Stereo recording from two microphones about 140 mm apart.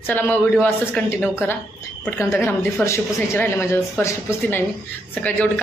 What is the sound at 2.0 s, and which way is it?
Speech, 20° left (ahead or behind).